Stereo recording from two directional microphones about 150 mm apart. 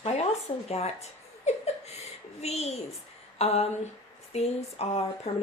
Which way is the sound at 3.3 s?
45° left (ahead or behind).